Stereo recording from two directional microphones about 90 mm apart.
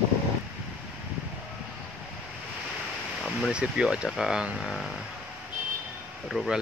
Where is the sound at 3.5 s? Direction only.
10° right (ahead or behind).